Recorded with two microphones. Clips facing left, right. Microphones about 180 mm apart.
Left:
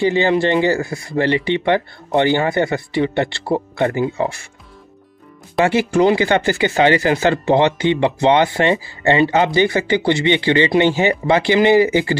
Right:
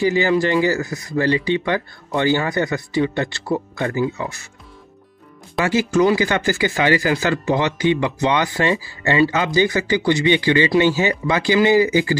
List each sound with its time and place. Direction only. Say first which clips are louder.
0.0 s speech: left 2 dB; 25° left (ahead or behind)
5.6 s speech: left 2 dB; 25° left (ahead or behind)